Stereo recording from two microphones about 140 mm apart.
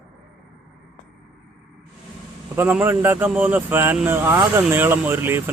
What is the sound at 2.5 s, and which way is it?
Speech, 15° right (ahead or behind).